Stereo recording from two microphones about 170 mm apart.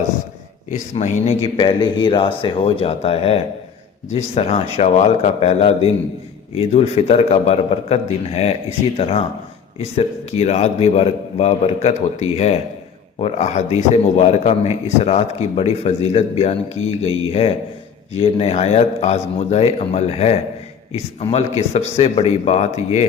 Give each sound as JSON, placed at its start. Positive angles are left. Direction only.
{"t": 0.7, "sound": "a man's voice", "side_deg": 45}
{"t": 1.5, "sound": "a man's voice", "side_deg": 25}